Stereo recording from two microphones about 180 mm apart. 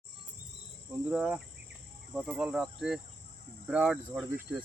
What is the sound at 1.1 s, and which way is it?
Speech, 5° right (ahead or behind).